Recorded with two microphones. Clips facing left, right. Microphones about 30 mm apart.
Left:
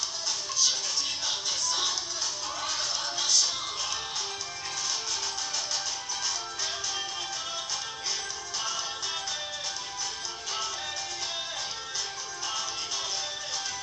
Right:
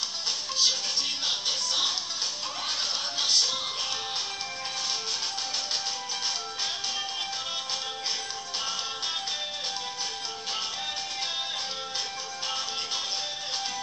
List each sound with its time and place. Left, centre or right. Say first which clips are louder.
0.6 s music: right 2 dB; right
12.4 s music: right 2 dB; right